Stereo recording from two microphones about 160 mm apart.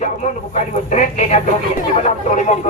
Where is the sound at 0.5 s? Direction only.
50° left (ahead or behind).